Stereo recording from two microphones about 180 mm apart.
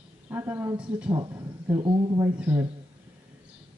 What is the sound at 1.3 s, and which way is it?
Speech, 15° right (ahead or behind).